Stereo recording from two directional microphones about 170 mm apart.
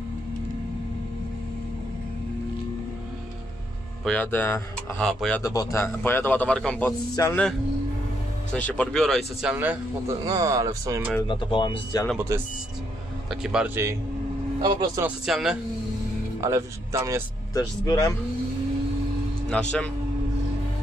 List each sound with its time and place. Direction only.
4.0 s a man's voice: 10° left (ahead or behind)
5.4 s a man's voice: 20° left (ahead or behind)
7.2 s speech: 20° left (ahead or behind)
8.5 s speech: 10° left (ahead or behind); by 10.1 s 10° right (ahead or behind)
10.2 s speech: 20° right (ahead or behind)
11.2 s speech: 30° left (ahead or behind)
13.3 s speech: 5° right (ahead or behind)
14.6 s speech: 30° right (ahead or behind)
15.2 s speech: 5° right (ahead or behind)
16.3 s speech: 20° right (ahead or behind)
17.6 s speech: 20° left (ahead or behind)
19.5 s a man's voice: 5° left (ahead or behind)